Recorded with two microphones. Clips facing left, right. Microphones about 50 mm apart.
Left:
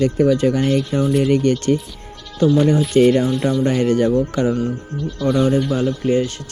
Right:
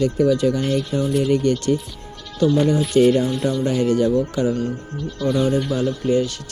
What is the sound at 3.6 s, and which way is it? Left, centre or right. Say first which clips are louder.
Speech: left 1 dB; left.